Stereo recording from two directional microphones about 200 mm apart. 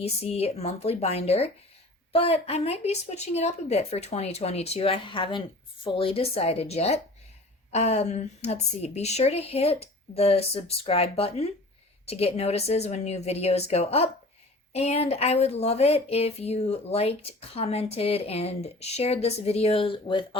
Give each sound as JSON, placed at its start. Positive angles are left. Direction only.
{"t": 0.0, "sound": "speech", "side_deg": 30}